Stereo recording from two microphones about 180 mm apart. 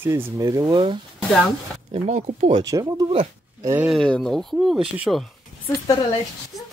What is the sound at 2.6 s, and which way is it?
Speech, 20° right (ahead or behind).